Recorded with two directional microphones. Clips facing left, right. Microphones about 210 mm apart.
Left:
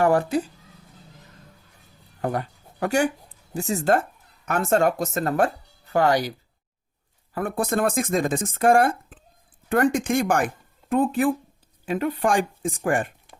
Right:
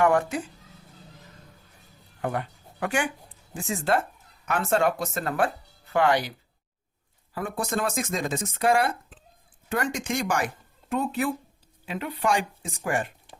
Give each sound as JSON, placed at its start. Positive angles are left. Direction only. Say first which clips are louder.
{"t": 0.0, "sound": "speech", "louder": "left 2 dB", "side_deg": 35}
{"t": 2.2, "sound": "speech", "louder": "left 3 dB", "side_deg": 40}
{"t": 7.3, "sound": "speech", "louder": "left 5 dB", "side_deg": 55}